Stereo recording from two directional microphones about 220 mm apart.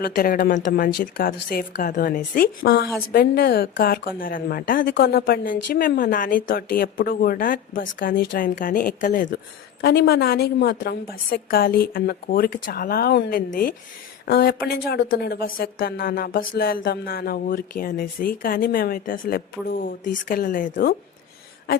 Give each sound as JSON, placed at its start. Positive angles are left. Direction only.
{"t": 0.0, "sound": "speech", "side_deg": 40}
{"t": 9.8, "sound": "a woman's voice", "side_deg": 45}